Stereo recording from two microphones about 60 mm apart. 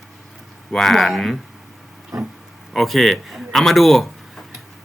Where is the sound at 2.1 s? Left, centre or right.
Right.